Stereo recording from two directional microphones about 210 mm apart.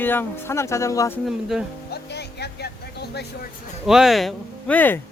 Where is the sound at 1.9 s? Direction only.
50° left (ahead or behind).